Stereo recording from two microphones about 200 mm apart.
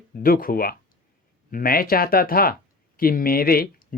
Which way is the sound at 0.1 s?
45° left (ahead or behind).